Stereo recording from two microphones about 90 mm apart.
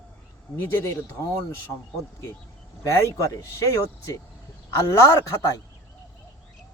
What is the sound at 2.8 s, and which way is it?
Speech, 35° left (ahead or behind).